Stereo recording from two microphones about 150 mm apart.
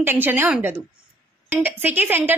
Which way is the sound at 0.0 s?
15° right (ahead or behind).